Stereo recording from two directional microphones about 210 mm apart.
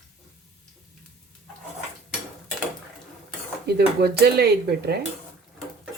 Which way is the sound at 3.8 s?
50° right (ahead or behind).